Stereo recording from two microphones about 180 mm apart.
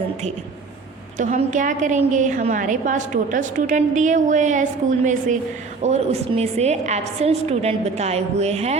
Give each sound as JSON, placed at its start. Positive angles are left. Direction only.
{"t": 1.2, "sound": "a woman's voice", "side_deg": -45}